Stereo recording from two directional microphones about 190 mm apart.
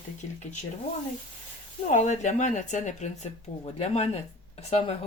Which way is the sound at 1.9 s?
40° left (ahead or behind).